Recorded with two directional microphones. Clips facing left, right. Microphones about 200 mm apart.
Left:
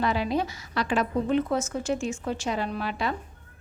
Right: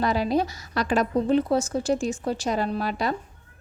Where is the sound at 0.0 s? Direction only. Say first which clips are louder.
Right 3 dB; 40° right (ahead or behind).